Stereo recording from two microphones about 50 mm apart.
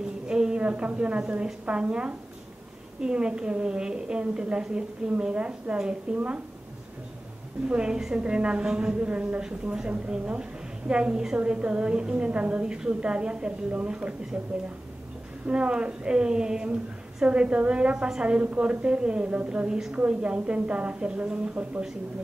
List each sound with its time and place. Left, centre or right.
0.3 s a woman's voice: centre
7.6 s a woman's voice: centre
15.4 s a woman's voice: centre